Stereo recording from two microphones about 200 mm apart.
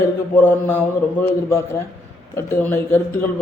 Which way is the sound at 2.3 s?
10° left (ahead or behind).